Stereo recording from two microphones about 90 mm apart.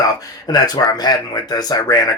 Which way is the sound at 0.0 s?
45° left (ahead or behind).